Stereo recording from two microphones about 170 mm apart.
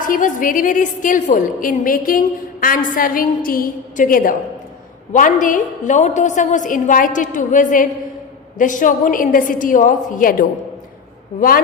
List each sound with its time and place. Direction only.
0.0 s a woman's voice: 50° left (ahead or behind)